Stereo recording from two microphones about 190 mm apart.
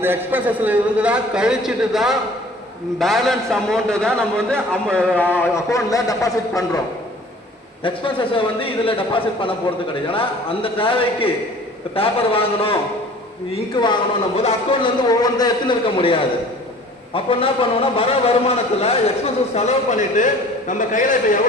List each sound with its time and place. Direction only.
0.0 s a man's voice: 10° right (ahead or behind); by 6.7 s 20° left (ahead or behind)
7.9 s a man's voice: 25° left (ahead or behind); by 21.2 s 45° left (ahead or behind)